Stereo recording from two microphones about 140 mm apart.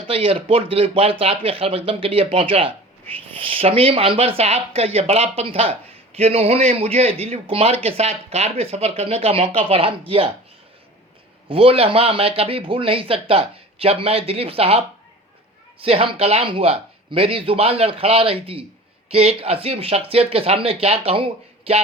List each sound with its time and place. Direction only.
0.1 s a man's voice: 40° right (ahead or behind)
11.4 s a man's voice: 40° right (ahead or behind)